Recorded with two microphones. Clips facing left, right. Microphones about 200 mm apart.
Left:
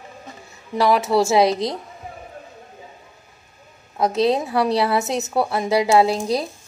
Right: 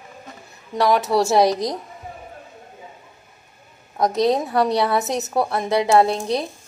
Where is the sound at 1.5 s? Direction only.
25° left (ahead or behind).